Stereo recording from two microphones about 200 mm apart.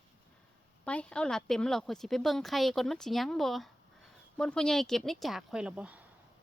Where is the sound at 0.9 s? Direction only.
5° left (ahead or behind).